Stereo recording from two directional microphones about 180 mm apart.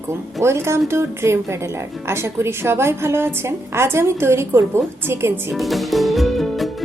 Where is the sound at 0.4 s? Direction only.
15° right (ahead or behind).